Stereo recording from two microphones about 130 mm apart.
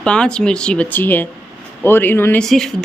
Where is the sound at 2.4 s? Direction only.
5° left (ahead or behind).